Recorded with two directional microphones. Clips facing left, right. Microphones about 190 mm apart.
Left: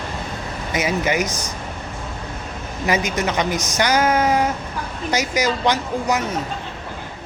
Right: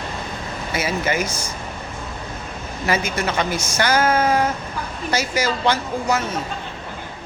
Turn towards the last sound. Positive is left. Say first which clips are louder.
# left 1 dB
turn(degrees=15)  # may be behind; listen again after turning